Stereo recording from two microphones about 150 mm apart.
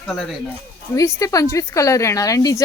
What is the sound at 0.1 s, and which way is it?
Speech, centre (ahead or behind).